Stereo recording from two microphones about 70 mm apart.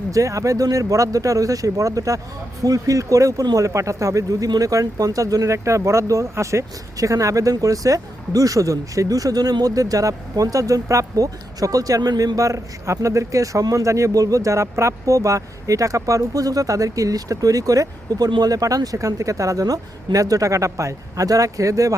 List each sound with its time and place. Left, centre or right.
0.1 s speech: right